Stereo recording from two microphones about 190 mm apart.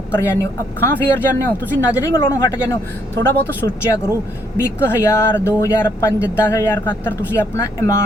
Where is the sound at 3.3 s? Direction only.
10° left (ahead or behind).